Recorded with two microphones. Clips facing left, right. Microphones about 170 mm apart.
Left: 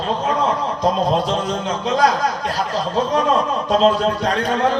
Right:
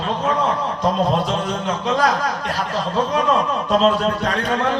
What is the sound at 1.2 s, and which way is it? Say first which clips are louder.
A man's voice: left 1 dB; 35° left (ahead or behind).